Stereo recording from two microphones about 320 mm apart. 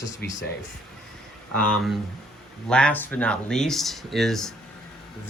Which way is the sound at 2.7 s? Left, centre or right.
Centre.